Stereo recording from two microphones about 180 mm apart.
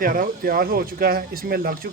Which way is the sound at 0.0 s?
50° right (ahead or behind).